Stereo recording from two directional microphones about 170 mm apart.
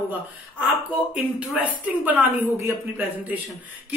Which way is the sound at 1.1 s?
10° right (ahead or behind).